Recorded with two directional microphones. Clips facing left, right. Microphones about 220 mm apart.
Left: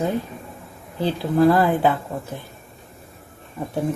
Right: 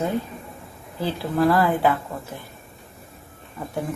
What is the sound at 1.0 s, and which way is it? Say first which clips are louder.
Speech: left 4 dB; 20° left (ahead or behind).